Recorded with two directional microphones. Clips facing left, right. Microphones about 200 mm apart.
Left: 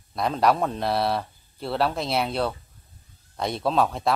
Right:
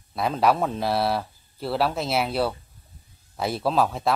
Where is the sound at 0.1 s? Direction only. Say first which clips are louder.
Even; 5° right (ahead or behind).